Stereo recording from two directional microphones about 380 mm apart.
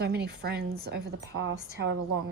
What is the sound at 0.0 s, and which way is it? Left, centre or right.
Speech, right.